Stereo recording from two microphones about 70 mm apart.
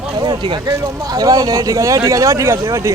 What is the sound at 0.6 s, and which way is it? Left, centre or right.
A man's voice, right.